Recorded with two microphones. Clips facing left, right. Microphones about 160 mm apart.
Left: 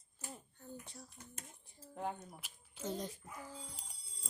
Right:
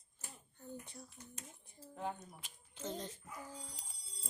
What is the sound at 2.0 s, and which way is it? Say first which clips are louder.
Speech: left 1 dB; 10° left (ahead or behind).